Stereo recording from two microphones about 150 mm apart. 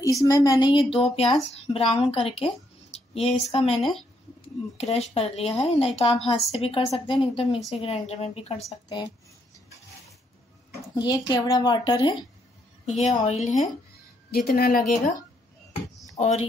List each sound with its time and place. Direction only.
0.0 s a woman's voice: 20° left (ahead or behind); by 6.1 s 40° left (ahead or behind)
6.1 s a woman's voice: centre (ahead or behind)
6.5 s a woman's voice: 40° left (ahead or behind)
8.8 s a woman's voice: 30° left (ahead or behind)
11.0 s a woman's voice: 25° left (ahead or behind)
13.1 s a woman's voice: 55° left (ahead or behind)
14.3 s a woman's voice: 75° left (ahead or behind)
16.2 s a woman's voice: 50° left (ahead or behind)